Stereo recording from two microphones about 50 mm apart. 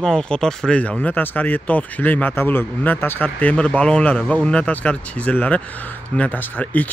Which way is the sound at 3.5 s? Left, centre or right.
Left.